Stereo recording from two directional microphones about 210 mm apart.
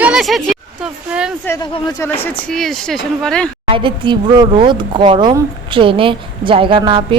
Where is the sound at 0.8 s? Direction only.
5° right (ahead or behind).